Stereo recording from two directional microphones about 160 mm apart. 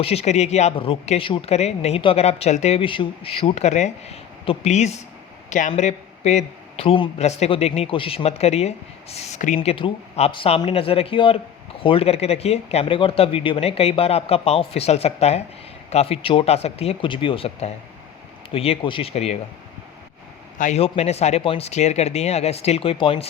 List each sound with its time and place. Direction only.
0.0 s speech: 40° left (ahead or behind)
9.6 s speech: 35° left (ahead or behind)
20.6 s speech: 45° left (ahead or behind)